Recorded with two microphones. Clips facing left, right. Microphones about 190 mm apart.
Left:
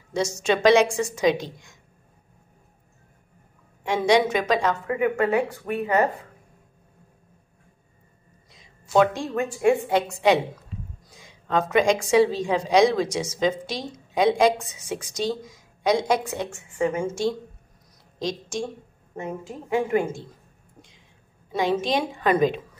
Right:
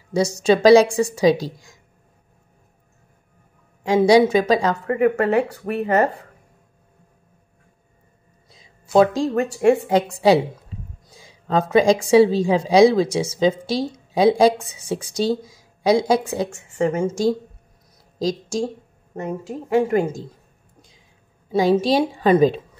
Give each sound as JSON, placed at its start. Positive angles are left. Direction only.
{"t": 0.1, "sound": "a woman's voice", "side_deg": -35}
{"t": 3.8, "sound": "a woman's voice", "side_deg": -35}
{"t": 8.5, "sound": "a sound", "side_deg": -35}
{"t": 9.2, "sound": "a woman's voice", "side_deg": -40}
{"t": 19.7, "sound": "a woman's voice", "side_deg": -40}
{"t": 21.5, "sound": "a woman's voice", "side_deg": -35}